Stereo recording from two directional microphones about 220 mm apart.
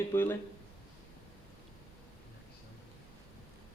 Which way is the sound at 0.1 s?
10° left (ahead or behind).